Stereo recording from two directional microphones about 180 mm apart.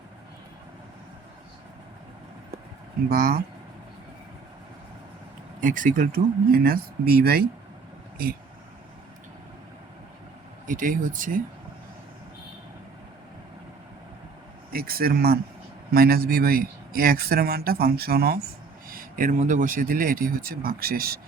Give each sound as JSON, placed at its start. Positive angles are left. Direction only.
{"t": 3.1, "sound": "speech", "side_deg": -55}
{"t": 5.5, "sound": "speech", "side_deg": -45}
{"t": 10.7, "sound": "speech", "side_deg": -45}
{"t": 14.7, "sound": "speech", "side_deg": -55}